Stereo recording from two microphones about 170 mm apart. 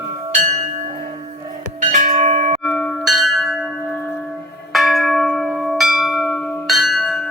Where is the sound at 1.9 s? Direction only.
45° right (ahead or behind).